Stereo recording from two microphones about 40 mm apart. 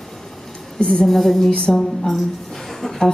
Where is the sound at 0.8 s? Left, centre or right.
Left.